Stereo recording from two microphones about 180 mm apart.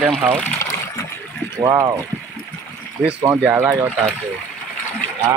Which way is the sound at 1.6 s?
15° right (ahead or behind).